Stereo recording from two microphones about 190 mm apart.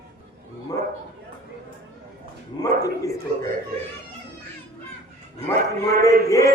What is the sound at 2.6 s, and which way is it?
Speech, 20° left (ahead or behind).